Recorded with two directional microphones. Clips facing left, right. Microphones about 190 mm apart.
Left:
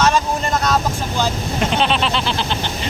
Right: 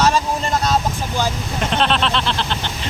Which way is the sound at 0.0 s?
30° right (ahead or behind).